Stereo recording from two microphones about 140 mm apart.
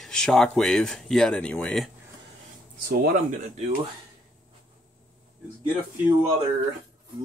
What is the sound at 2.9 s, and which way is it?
Speech, 90° right.